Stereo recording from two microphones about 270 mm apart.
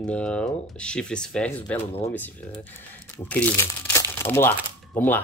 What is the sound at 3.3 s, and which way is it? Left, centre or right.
Speech, centre.